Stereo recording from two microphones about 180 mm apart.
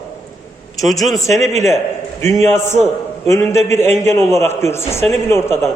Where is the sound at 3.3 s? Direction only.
15° left (ahead or behind).